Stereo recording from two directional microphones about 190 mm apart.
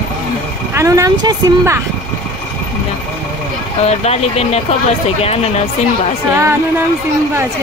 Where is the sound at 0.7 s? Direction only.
15° right (ahead or behind).